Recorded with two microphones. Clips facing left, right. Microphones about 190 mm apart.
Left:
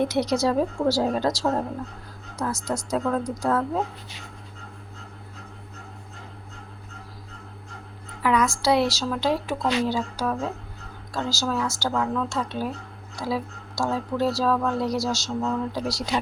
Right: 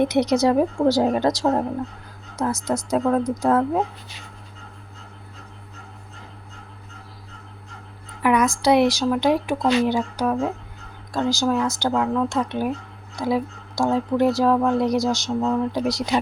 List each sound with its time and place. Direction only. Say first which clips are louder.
0.0 s a woman's voice: right 4 dB; 20° right (ahead or behind)
8.2 s a woman's voice: right 3 dB; 20° right (ahead or behind)